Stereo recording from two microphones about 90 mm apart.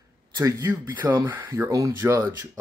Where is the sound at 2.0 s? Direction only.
30° right (ahead or behind).